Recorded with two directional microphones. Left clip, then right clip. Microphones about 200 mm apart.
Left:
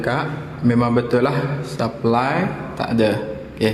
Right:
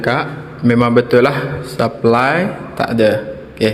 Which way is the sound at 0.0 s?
20° right (ahead or behind).